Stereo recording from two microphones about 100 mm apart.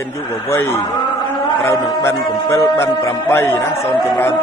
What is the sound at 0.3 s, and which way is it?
Speech, 25° left (ahead or behind).